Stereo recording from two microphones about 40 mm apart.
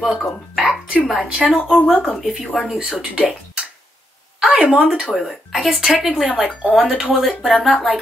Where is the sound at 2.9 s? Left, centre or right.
Right.